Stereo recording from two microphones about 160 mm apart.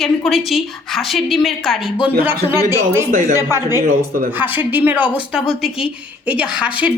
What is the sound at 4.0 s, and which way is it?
Speech, 65° right (ahead or behind).